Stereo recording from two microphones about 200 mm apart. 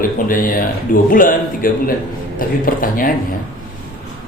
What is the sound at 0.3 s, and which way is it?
Speech, 45° left (ahead or behind).